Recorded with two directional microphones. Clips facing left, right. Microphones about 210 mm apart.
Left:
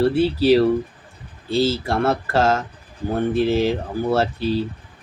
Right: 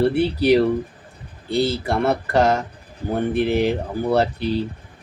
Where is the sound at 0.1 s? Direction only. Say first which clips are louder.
Left 1 dB; 20° right (ahead or behind).